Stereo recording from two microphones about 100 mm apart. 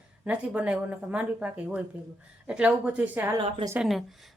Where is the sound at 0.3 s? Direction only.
10° right (ahead or behind).